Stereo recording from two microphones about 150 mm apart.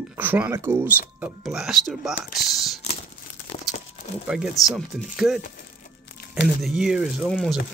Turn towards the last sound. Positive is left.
turn(degrees=0)  # may be behind; listen again after turning